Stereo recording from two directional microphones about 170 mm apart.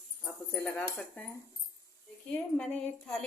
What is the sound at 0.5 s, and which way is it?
Speech, 5° left (ahead or behind).